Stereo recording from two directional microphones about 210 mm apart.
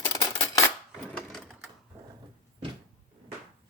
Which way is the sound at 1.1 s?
Centre (ahead or behind).